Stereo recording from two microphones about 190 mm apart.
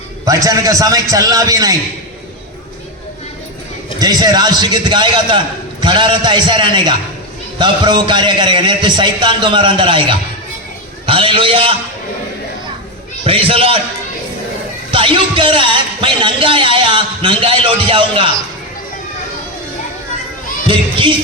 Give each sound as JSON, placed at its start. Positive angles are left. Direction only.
{"t": 0.3, "sound": "a man's voice", "side_deg": -20}
{"t": 4.0, "sound": "speech", "side_deg": -20}
{"t": 13.2, "sound": "speech", "side_deg": -30}
{"t": 14.9, "sound": "speech", "side_deg": -25}
{"t": 20.7, "sound": "speech", "side_deg": -25}